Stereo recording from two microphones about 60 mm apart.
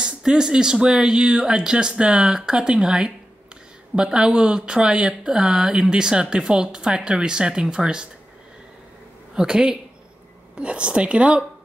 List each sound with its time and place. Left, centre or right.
0.0 s speech: centre
9.3 s speech: centre